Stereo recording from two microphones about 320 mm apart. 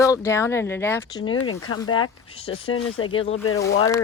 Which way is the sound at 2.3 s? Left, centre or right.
Centre.